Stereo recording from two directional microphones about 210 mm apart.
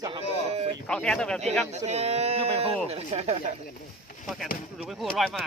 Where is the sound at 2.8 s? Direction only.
30° right (ahead or behind).